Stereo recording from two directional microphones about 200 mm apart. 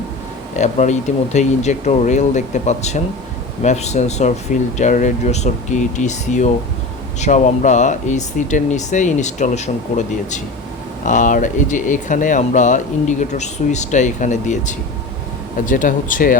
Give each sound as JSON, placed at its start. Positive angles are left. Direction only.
{"t": 0.5, "sound": "speech", "side_deg": 35}